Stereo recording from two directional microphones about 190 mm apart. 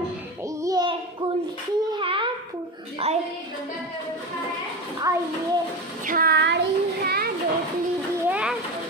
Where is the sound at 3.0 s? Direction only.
30° right (ahead or behind).